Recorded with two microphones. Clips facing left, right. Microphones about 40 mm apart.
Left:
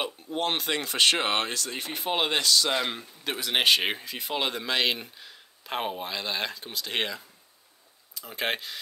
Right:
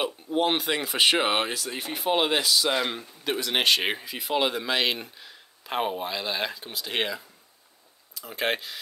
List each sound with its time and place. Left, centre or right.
0.0 s speech: centre